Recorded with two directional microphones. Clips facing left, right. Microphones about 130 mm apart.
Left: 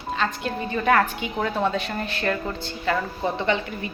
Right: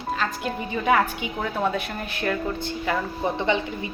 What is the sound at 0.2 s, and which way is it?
A woman's voice, 10° right (ahead or behind).